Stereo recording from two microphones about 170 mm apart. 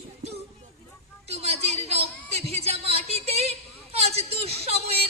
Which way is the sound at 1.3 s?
40° right (ahead or behind).